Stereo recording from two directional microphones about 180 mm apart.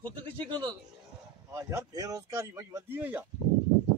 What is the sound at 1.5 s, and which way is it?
A man's voice, 15° right (ahead or behind).